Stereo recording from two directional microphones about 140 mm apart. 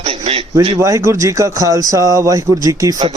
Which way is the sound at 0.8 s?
20° right (ahead or behind).